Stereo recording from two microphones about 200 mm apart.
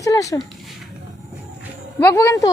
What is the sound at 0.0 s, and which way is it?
Speech, 15° left (ahead or behind).